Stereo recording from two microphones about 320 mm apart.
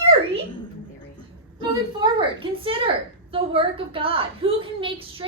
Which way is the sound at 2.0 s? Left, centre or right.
Centre.